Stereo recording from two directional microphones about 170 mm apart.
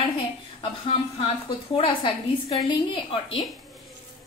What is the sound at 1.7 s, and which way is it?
A woman's voice, 30° left (ahead or behind).